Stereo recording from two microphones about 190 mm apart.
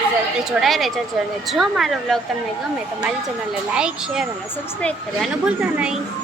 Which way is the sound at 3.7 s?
5° right (ahead or behind).